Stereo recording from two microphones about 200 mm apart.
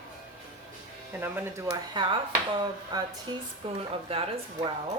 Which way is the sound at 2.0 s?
20° right (ahead or behind).